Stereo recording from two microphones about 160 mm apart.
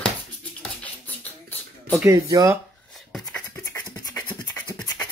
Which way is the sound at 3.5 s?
20° left (ahead or behind).